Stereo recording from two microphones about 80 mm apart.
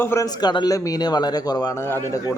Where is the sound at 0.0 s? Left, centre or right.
Left.